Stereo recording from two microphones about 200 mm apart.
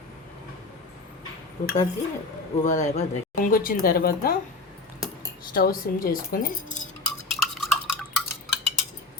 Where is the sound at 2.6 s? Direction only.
35° left (ahead or behind).